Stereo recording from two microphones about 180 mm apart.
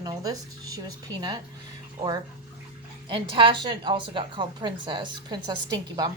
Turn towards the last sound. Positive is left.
turn(degrees=-20)  # may be behind; listen again after turning